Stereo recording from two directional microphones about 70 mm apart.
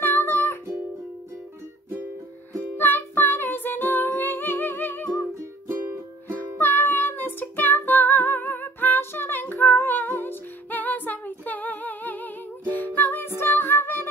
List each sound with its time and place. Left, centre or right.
0.0 s music: left
2.5 s music: left
6.3 s music: left